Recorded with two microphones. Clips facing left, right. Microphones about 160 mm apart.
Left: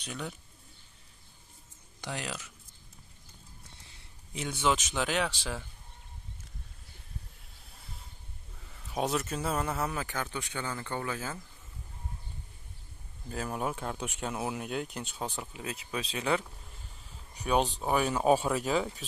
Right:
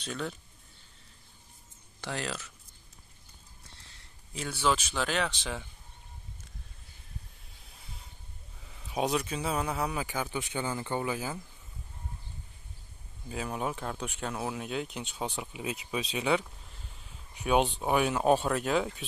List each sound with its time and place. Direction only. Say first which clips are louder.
0.0 s speech: right 3 dB; 15° left (ahead or behind)
2.0 s speech: right 2 dB; 10° left (ahead or behind)
4.3 s speech: even; 20° left (ahead or behind)
8.6 s a man's voice: right 1 dB; 5° right (ahead or behind)
10.3 s speech: right 3 dB; 15° right (ahead or behind)
13.3 s speech: even; centre (ahead or behind)
15.2 s speech: right 4 dB; 10° right (ahead or behind)